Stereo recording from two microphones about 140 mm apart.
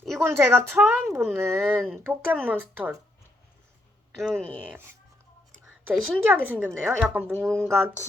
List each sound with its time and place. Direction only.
0.2 s speech: 15° right (ahead or behind)
4.2 s speech: 5° left (ahead or behind)
6.2 s speech: 10° right (ahead or behind)
7.4 s speech: 5° left (ahead or behind)